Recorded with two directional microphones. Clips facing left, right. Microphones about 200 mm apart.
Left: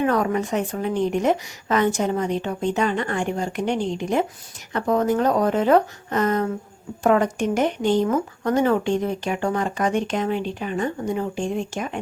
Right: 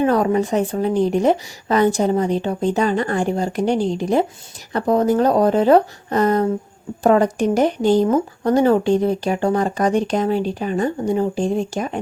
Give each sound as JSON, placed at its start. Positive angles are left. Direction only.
{"t": 0.0, "sound": "speech", "side_deg": -30}